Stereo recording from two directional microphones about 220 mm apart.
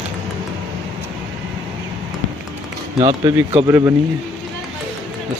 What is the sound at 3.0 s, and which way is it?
Speech, 20° right (ahead or behind).